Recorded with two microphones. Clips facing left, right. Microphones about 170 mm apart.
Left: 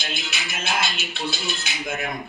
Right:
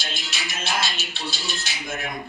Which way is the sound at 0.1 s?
55° left (ahead or behind).